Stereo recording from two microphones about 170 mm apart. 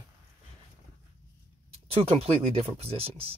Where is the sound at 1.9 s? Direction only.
35° right (ahead or behind).